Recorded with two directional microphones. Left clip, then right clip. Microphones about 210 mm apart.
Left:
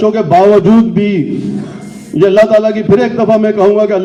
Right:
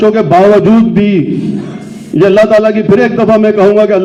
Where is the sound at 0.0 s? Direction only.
50° right (ahead or behind).